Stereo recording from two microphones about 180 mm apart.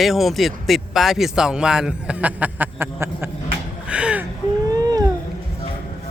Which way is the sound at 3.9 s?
5° right (ahead or behind).